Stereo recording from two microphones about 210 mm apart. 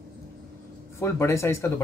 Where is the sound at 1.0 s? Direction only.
10° left (ahead or behind).